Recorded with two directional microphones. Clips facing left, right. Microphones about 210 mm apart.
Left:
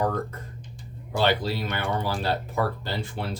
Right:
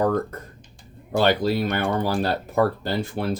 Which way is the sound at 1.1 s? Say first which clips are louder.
Right 4 dB; 45° right (ahead or behind).